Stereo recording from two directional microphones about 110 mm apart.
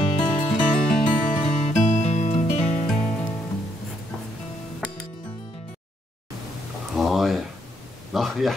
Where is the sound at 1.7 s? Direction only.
90° left.